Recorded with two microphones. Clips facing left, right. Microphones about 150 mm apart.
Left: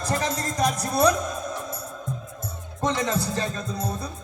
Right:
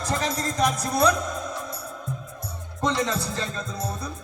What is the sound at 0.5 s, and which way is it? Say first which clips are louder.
Music: left 1 dB; 15° left (ahead or behind).